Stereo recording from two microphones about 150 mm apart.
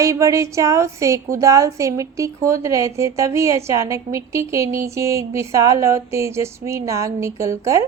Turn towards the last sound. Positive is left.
turn(degrees=-20)  # may be behind; listen again after turning